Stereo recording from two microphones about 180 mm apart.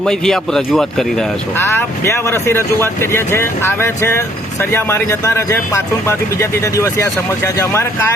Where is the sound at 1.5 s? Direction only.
15° left (ahead or behind).